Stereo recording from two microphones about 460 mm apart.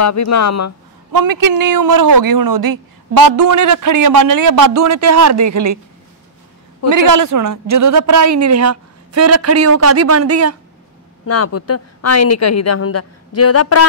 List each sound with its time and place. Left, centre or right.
0.0 s a woman's voice: left
1.1 s a man's voice: right
7.0 s a man's voice: right
11.2 s a woman's voice: left